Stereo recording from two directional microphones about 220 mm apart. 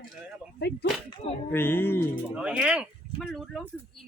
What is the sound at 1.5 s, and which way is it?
Speech, 10° left (ahead or behind).